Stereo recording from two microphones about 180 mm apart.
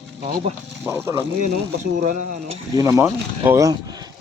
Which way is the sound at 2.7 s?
15° right (ahead or behind).